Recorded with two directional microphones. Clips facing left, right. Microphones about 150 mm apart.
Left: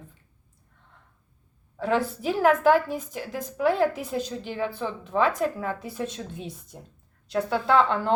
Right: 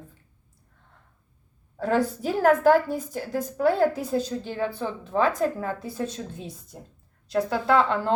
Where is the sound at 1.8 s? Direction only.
40° right (ahead or behind).